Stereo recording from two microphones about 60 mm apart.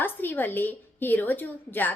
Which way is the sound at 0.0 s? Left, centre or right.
Left.